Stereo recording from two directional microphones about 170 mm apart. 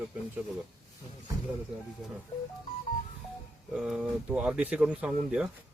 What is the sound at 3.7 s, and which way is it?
Speech, 5° right (ahead or behind).